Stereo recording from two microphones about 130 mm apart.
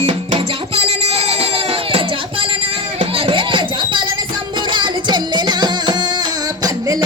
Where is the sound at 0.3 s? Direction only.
50° right (ahead or behind).